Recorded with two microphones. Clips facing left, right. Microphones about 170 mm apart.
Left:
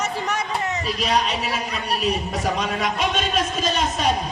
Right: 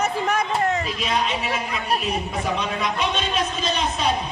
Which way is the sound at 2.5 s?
45° left (ahead or behind).